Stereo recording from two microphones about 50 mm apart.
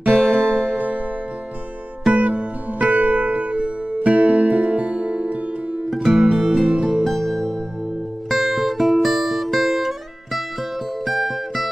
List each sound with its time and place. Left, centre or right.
0.0 s music: right
2.0 s music: right; by 11.7 s centre